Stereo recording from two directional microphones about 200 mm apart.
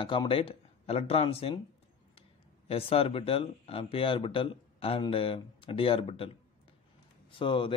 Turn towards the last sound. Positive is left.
turn(degrees=25)  # may be behind; listen again after turning